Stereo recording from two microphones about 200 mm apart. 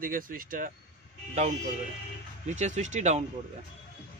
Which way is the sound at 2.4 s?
35° right (ahead or behind).